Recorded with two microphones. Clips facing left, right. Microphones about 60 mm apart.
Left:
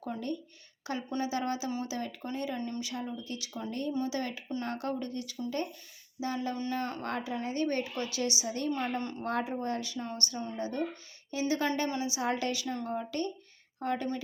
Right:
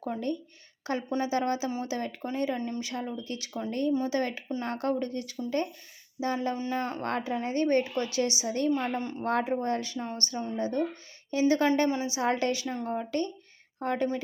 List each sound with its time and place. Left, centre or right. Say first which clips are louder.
0.0 s a woman's voice: right 4 dB; right
2.6 s speech: right 3 dB; right
2.8 s a woman's voice: right 3 dB; right
8.7 s a woman's voice: right 4 dB; centre
9.2 s a woman's voice: right 6 dB; right